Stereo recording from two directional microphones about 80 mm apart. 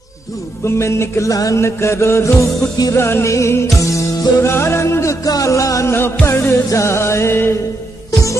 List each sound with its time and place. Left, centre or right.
0.7 s music: left